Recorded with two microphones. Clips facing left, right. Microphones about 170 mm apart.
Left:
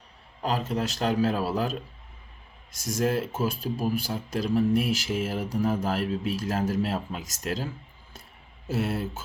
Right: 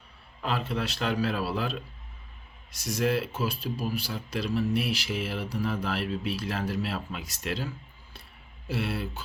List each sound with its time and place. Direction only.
0.4 s a man's voice: 40° left (ahead or behind)